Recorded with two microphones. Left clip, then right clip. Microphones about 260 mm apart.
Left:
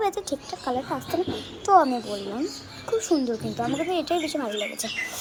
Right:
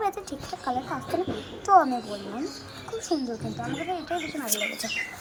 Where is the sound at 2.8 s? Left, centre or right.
Left.